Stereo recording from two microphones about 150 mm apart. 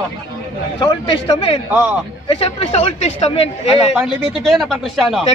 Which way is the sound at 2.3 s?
40° left (ahead or behind).